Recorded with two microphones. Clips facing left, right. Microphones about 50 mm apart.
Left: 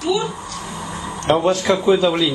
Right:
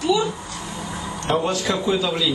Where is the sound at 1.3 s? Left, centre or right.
Left.